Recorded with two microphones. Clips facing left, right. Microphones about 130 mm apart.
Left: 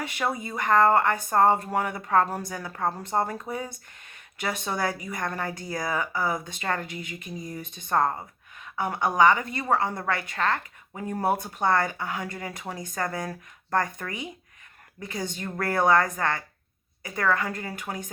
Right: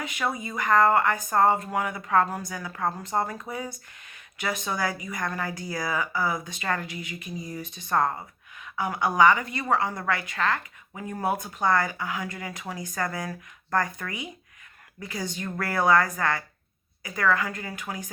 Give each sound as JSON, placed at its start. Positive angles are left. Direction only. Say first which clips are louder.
{"t": 0.4, "sound": "a woman's voice", "louder": "even", "side_deg": 30}
{"t": 7.0, "sound": "a sound", "louder": "even", "side_deg": 50}
{"t": 7.9, "sound": "a woman's voice", "louder": "left 1 dB", "side_deg": 25}
{"t": 15.1, "sound": "a woman's voice", "louder": "even", "side_deg": 25}